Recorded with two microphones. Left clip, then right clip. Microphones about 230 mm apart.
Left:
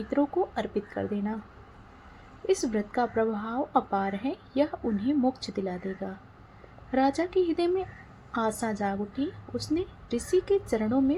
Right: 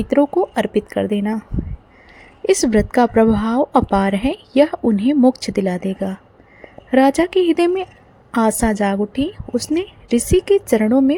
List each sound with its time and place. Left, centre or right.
0.1 s a woman's voice: right
2.5 s a woman's voice: right